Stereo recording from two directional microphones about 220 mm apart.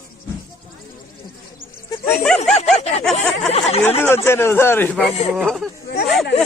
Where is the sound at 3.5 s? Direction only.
30° left (ahead or behind).